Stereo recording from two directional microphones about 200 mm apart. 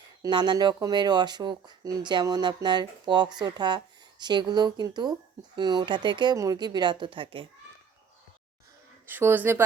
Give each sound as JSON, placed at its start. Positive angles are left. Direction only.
{"t": 0.2, "sound": "speech", "side_deg": -20}
{"t": 9.0, "sound": "speech", "side_deg": -10}